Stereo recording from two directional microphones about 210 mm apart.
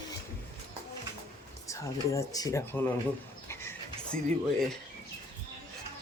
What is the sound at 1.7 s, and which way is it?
Speech, 15° left (ahead or behind).